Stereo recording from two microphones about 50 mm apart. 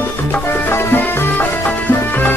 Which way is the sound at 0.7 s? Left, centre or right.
Left.